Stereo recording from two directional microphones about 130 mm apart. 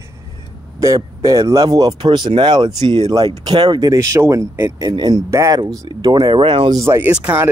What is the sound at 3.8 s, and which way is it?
Speech, 25° right (ahead or behind).